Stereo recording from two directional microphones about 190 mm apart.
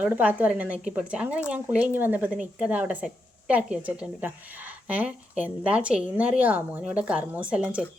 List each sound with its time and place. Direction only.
0.0 s speech: 5° right (ahead or behind)